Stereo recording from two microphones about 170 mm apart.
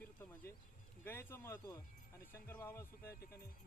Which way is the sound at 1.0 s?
15° left (ahead or behind).